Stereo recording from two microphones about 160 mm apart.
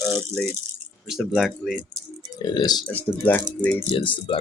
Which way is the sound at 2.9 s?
10° left (ahead or behind).